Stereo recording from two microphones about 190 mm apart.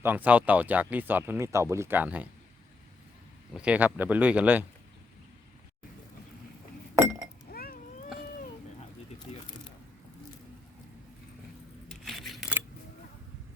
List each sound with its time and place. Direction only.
0.0 s speech: 10° right (ahead or behind)
3.5 s speech: 5° right (ahead or behind)
7.5 s a sound: 50° left (ahead or behind)
9.3 s squish: 30° left (ahead or behind)
12.0 s scissors: centre (ahead or behind)